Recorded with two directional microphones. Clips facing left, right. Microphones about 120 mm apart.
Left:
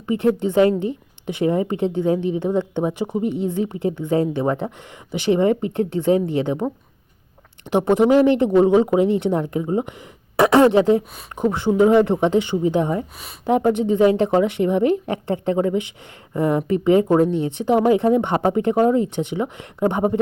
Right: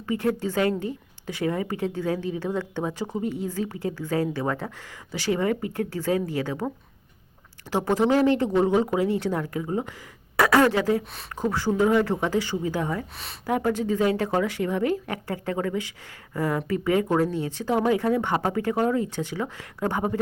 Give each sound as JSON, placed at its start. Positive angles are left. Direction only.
{"t": 0.1, "sound": "a woman's voice", "side_deg": 20}
{"t": 7.7, "sound": "a woman's voice", "side_deg": 20}